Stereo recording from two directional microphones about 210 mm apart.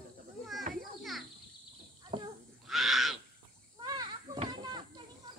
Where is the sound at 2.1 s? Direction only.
25° right (ahead or behind).